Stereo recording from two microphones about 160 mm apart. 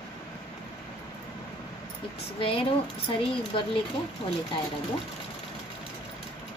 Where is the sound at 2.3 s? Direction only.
35° left (ahead or behind).